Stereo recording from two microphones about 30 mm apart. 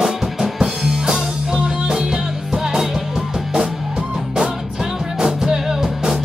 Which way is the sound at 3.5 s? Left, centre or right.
Right.